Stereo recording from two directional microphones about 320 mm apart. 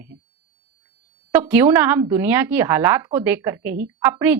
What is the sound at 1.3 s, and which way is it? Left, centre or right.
A woman's voice, centre.